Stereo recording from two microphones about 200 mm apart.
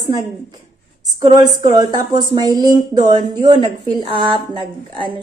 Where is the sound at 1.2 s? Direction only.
20° right (ahead or behind).